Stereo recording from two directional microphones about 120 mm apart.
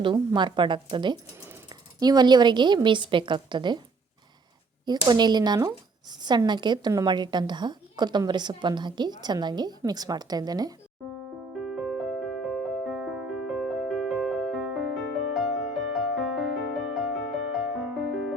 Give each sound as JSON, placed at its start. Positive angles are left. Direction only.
{"t": 0.3, "sound": "a woman's voice", "side_deg": -40}
{"t": 5.0, "sound": "a woman's voice", "side_deg": -35}
{"t": 11.6, "sound": "music", "side_deg": 0}